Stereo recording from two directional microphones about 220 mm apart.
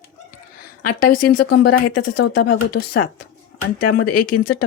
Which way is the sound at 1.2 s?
90° left.